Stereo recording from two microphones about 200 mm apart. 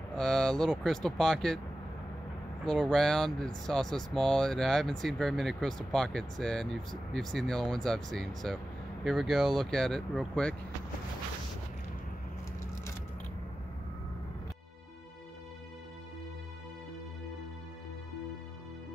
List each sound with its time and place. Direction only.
0.1 s speech: 5° left (ahead or behind)
2.6 s speech: centre (ahead or behind)